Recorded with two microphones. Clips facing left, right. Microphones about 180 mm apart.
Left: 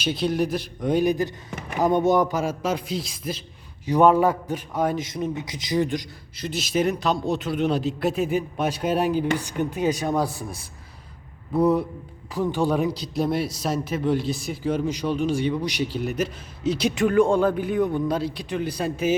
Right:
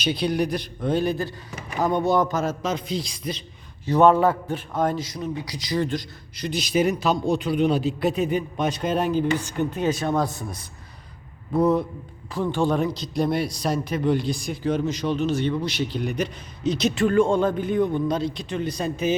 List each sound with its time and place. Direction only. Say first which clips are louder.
0.0 s a man's voice: even; centre (ahead or behind)
0.8 s speech: left 2 dB; 15° left (ahead or behind)
5.0 s speech: left 2 dB; 25° left (ahead or behind)
6.3 s a man's voice: right 2 dB; centre (ahead or behind)